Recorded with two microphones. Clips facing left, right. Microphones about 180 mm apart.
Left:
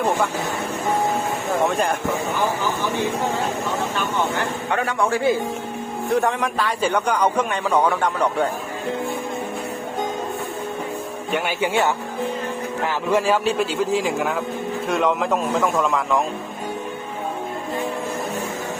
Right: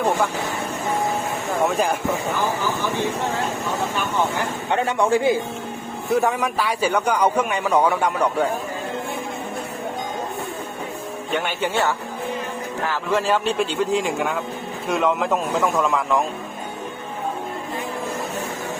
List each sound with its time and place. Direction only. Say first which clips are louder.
1.6 s a man's voice: right 1 dB; 5° right (ahead or behind)
4.7 s speech: right 3 dB; 25° right (ahead or behind)
6.1 s a man's voice: right 1 dB; 10° right (ahead or behind)
11.3 s a man's voice: left 2 dB; 10° left (ahead or behind)